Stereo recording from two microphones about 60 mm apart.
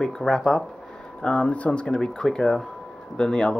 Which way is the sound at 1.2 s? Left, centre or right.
Left.